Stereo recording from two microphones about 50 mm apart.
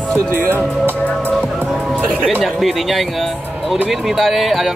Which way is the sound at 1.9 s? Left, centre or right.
Left.